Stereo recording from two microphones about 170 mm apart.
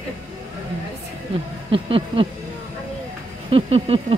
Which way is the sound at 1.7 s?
35° right (ahead or behind).